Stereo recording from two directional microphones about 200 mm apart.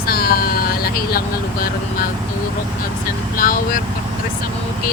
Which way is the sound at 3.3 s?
45° left (ahead or behind).